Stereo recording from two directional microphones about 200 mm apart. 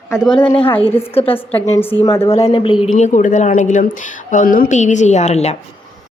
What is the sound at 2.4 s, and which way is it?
Speech, 25° left (ahead or behind).